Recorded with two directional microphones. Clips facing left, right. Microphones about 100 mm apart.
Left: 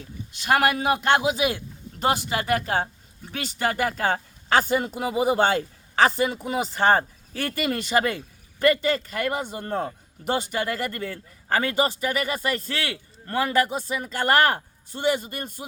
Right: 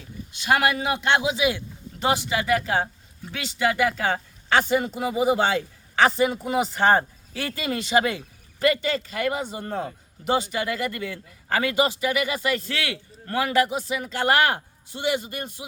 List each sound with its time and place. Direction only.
0.3 s speech: 45° left (ahead or behind)
7.4 s speech: 50° left (ahead or behind)